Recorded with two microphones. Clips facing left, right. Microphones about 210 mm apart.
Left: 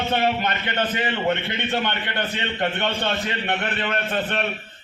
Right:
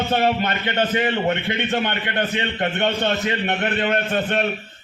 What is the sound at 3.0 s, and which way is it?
A man's voice, 45° right (ahead or behind).